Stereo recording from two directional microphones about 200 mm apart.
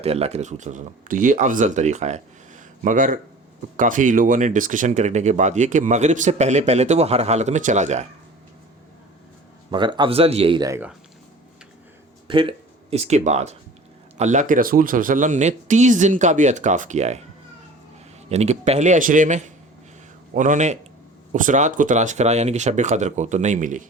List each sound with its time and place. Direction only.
0.0 s speech: 30° right (ahead or behind)
9.7 s speech: 25° right (ahead or behind)
12.3 s speech: 25° right (ahead or behind)
18.3 s speech: 35° right (ahead or behind)